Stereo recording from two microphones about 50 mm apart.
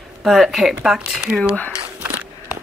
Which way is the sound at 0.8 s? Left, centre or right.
Centre.